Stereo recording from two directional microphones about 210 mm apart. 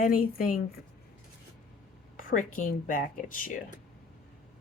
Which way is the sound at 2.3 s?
40° left (ahead or behind).